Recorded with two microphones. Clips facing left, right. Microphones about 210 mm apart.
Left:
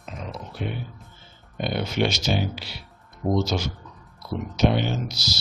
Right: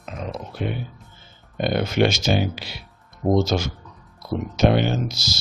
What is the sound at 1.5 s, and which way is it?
Speech, 50° right (ahead or behind).